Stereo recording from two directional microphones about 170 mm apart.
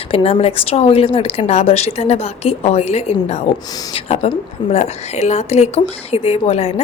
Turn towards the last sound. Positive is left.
turn(degrees=35)  # may be behind; listen again after turning